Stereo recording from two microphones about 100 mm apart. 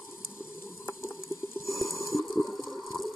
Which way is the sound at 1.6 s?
Centre (ahead or behind).